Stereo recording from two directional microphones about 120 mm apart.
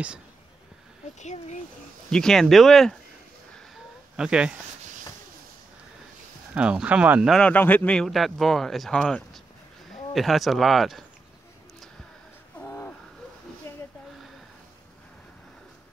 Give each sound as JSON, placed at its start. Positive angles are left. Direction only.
{"t": 1.2, "sound": "speech", "side_deg": 80}
{"t": 2.0, "sound": "speech", "side_deg": 5}
{"t": 3.5, "sound": "a sound", "side_deg": -5}
{"t": 6.5, "sound": "speech", "side_deg": -10}
{"t": 7.3, "sound": "speech", "side_deg": 10}
{"t": 12.5, "sound": "a sound", "side_deg": 20}